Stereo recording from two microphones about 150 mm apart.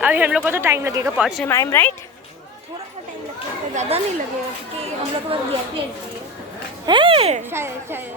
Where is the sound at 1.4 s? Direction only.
15° left (ahead or behind).